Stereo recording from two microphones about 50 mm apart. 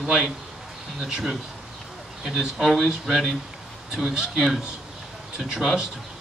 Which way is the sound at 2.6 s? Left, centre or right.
Centre.